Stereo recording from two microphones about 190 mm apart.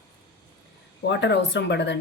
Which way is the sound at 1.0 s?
65° left (ahead or behind).